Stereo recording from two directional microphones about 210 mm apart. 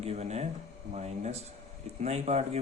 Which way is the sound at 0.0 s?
30° right (ahead or behind).